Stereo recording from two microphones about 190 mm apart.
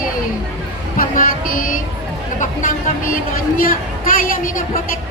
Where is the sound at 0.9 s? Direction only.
45° left (ahead or behind).